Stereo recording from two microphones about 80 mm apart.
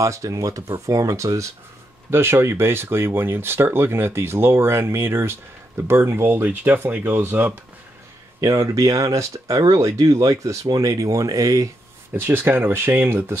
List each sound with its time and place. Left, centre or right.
0.0 s speech: right
8.4 s speech: right
12.1 s speech: right